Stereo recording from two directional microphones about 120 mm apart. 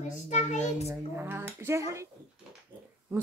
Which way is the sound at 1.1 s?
20° right (ahead or behind).